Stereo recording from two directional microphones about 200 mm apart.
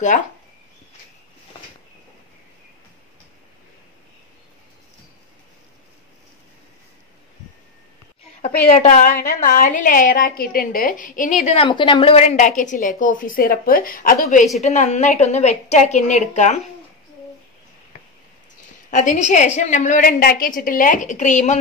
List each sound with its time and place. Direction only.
8.6 s a woman's voice: 35° left (ahead or behind)
18.9 s a woman's voice: 40° left (ahead or behind)